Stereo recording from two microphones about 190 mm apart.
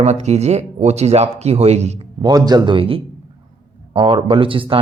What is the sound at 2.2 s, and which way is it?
Speech, 20° right (ahead or behind).